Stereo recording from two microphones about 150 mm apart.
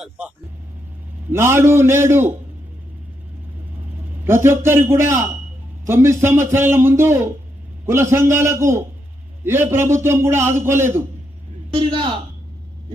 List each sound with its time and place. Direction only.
1.3 s a man's voice: 15° right (ahead or behind)
4.2 s a man's voice: 15° right (ahead or behind)
11.7 s a man's voice: 30° right (ahead or behind)